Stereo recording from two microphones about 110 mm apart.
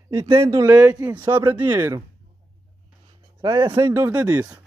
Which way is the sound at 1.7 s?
25° right (ahead or behind).